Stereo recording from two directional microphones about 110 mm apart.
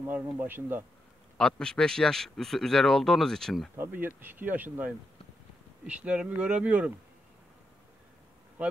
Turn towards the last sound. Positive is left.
turn(degrees=-10)  # may be behind; listen again after turning